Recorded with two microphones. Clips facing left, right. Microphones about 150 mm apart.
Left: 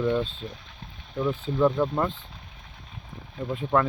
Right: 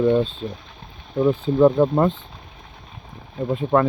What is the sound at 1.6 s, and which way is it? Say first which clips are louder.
Speech: right 7 dB; 30° right (ahead or behind).